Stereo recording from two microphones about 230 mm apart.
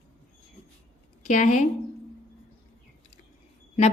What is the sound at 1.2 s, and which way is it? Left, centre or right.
Speech, left.